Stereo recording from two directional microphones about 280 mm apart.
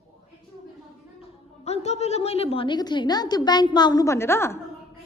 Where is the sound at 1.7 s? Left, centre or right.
Left.